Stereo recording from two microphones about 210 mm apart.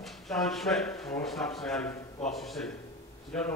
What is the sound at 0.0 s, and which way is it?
Speech, centre (ahead or behind).